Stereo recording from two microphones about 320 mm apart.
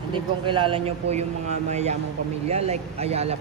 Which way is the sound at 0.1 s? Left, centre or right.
Centre.